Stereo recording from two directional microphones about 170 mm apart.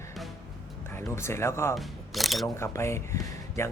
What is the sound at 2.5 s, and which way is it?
Speech, 15° left (ahead or behind).